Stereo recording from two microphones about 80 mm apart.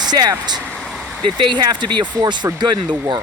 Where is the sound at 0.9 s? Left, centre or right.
Centre.